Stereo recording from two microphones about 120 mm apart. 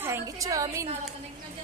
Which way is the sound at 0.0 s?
25° right (ahead or behind).